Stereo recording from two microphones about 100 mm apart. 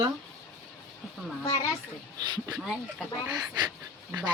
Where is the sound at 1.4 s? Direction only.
35° left (ahead or behind).